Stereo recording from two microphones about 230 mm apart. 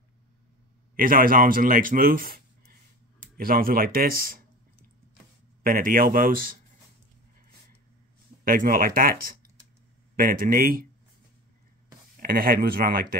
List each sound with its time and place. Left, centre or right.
0.9 s speech: right
5.6 s speech: right
8.5 s speech: right
12.2 s speech: right